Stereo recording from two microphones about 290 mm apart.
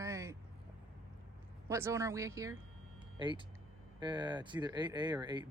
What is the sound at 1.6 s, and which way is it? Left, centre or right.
Speech, centre.